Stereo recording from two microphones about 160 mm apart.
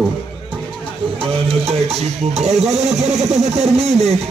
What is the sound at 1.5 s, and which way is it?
Music, 40° right (ahead or behind).